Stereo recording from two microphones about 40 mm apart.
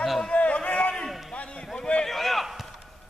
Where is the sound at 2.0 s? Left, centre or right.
Centre.